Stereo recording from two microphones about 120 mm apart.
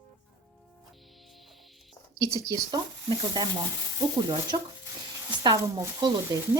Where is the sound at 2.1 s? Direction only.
25° right (ahead or behind).